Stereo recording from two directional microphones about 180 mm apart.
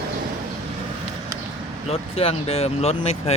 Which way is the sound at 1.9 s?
35° left (ahead or behind).